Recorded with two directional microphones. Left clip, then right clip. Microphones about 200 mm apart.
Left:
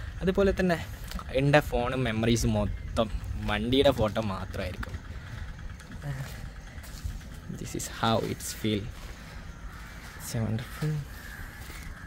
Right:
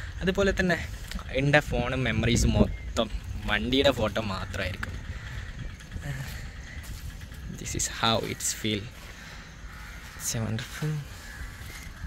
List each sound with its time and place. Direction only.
0.2 s speech: 15° left (ahead or behind)
7.6 s speech: 15° left (ahead or behind)
10.2 s speech: 5° left (ahead or behind)